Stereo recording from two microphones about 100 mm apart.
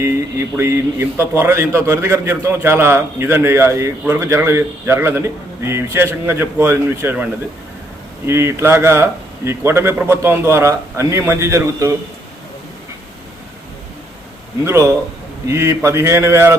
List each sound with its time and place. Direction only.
0.0 s a man's voice: 25° right (ahead or behind)
8.3 s a man's voice: 25° right (ahead or behind)
14.6 s a man's voice: 25° right (ahead or behind)